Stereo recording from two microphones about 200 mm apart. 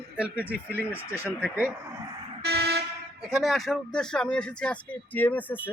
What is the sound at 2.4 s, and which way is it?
Vehicle, 55° right (ahead or behind).